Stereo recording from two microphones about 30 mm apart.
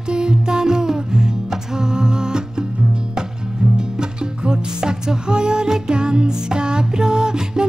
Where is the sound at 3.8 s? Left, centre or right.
Right.